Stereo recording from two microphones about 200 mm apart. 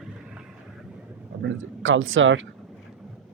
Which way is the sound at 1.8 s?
75° right (ahead or behind).